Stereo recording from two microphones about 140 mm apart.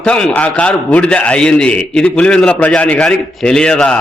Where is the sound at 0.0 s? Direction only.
5° left (ahead or behind).